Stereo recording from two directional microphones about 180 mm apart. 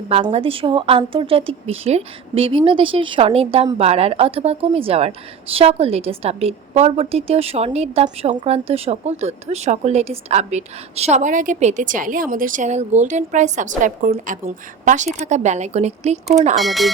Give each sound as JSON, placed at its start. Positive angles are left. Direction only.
{"t": 0.1, "sound": "speech", "side_deg": -35}
{"t": 16.6, "sound": "speech", "side_deg": 0}